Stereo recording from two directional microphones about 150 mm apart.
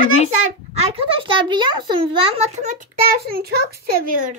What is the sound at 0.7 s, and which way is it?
A child's voice, 35° right (ahead or behind).